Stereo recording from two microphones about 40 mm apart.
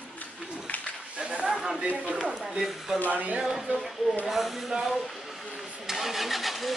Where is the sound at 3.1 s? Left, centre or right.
Right.